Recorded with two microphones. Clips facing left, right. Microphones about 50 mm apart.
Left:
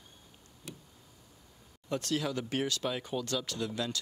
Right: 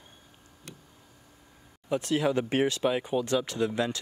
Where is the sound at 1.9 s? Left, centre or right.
Centre.